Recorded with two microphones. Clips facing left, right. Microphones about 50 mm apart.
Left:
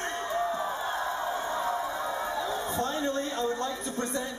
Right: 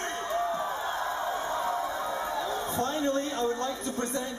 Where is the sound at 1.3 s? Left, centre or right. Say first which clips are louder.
Even; centre.